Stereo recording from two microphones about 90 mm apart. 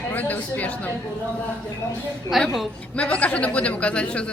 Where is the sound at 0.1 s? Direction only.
20° left (ahead or behind).